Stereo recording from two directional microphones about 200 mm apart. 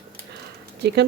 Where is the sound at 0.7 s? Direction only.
55° right (ahead or behind).